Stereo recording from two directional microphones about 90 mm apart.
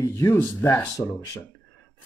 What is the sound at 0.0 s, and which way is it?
Speech, 35° left (ahead or behind).